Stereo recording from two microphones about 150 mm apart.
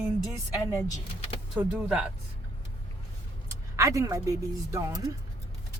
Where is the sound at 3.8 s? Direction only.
20° right (ahead or behind).